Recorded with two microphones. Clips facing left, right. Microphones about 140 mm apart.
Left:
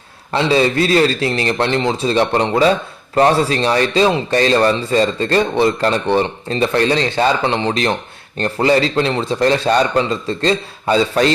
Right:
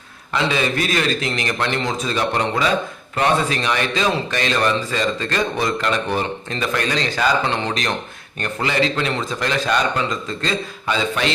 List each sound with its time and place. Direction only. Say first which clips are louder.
0.3 s speech: left 6 dB; 30° left (ahead or behind)
7.4 s speech: left 5 dB; 20° left (ahead or behind)
7.7 s speech: left 6 dB; 30° left (ahead or behind)